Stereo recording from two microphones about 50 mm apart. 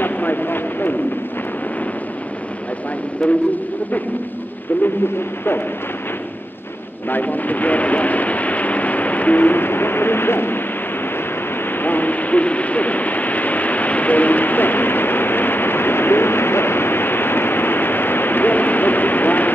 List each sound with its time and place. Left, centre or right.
0.0 s a sound: left
3.2 s speech: centre
7.1 s speech: left
11.8 s vehicle: left